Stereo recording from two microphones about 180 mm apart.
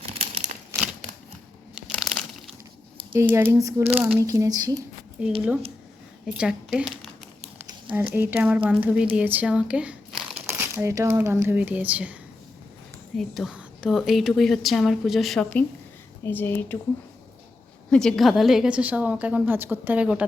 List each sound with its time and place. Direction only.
0.0 s a sound: 35° right (ahead or behind)
1.9 s crumpling: centre (ahead or behind)
3.1 s a woman's voice: 15° right (ahead or behind)
5.2 s a woman's voice: 5° right (ahead or behind)
13.1 s a woman's voice: centre (ahead or behind)
17.9 s a woman's voice: centre (ahead or behind)